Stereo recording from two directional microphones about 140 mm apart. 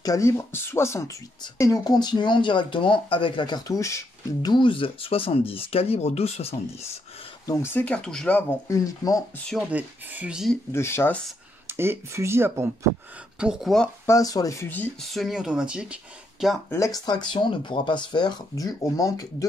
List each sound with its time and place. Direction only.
0.0 s speech: 20° left (ahead or behind); by 6.9 s 50° left (ahead or behind)
7.4 s speech: 20° left (ahead or behind)
8.6 s speech: 25° left (ahead or behind)
9.7 s speech: 10° right (ahead or behind)
10.7 s speech: 20° left (ahead or behind)
11.7 s speech: 15° right (ahead or behind)
13.4 s speech: 5° right (ahead or behind)
14.0 s speech: 25° left (ahead or behind)
15.0 s speech: centre (ahead or behind)
16.7 s speech: 20° left (ahead or behind)
17.3 s speech: 35° left (ahead or behind)